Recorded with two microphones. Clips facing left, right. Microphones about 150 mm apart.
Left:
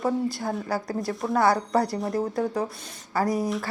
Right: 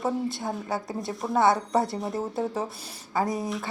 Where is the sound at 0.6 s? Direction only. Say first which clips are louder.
Left 2 dB; 20° right (ahead or behind).